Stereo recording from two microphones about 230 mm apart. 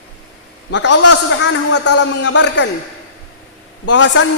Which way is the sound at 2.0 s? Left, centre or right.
Left.